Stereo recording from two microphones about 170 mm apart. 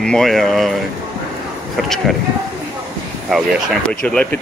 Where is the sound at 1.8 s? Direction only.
Centre (ahead or behind).